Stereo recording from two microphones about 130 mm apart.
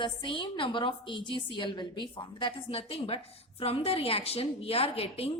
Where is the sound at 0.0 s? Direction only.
40° left (ahead or behind).